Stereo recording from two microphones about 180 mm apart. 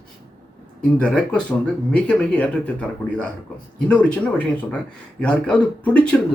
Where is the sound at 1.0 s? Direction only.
5° left (ahead or behind).